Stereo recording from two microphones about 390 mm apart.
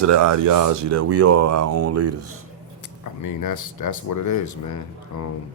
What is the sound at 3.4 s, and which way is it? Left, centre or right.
Speech, left.